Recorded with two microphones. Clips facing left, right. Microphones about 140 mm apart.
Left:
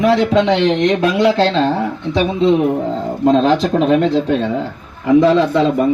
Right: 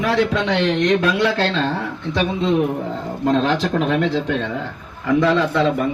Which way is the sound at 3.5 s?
35° left (ahead or behind).